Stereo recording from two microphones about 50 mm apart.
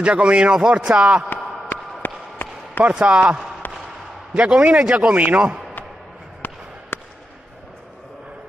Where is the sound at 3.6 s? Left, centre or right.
Left.